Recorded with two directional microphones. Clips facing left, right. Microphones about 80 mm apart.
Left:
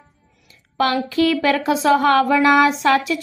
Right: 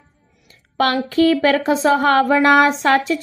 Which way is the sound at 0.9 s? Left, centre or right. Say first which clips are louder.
Right 3 dB; right.